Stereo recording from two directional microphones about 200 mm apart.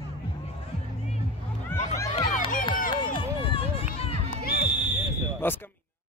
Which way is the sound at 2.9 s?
25° left (ahead or behind).